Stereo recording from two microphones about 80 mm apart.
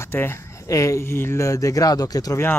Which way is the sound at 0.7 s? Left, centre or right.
Left.